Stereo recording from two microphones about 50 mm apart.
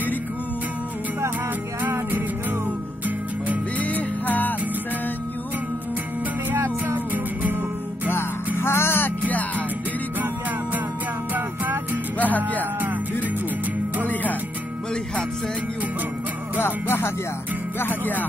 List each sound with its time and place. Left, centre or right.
1.8 s music: right
3.8 s music: left
6.5 s music: right
8.5 s music: left
11.3 s music: right
12.2 s music: left
16.5 s music: left
17.7 s music: left